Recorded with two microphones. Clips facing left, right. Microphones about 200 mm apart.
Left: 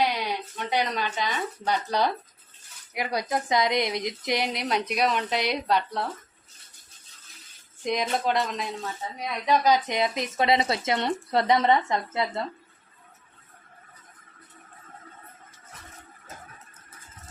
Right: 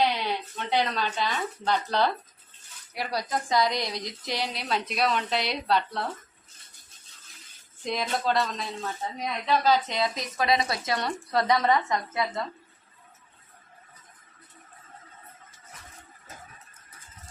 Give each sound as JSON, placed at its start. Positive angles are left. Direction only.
{"t": 0.0, "sound": "a woman's voice", "side_deg": 10}
{"t": 7.9, "sound": "a woman's voice", "side_deg": 15}